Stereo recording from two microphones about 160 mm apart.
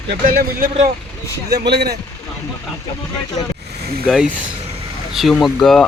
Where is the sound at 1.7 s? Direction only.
90° right.